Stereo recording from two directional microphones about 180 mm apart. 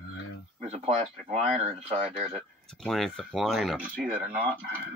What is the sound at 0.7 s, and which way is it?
Speech, 40° right (ahead or behind).